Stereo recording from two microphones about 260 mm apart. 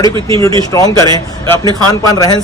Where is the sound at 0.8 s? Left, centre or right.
Centre.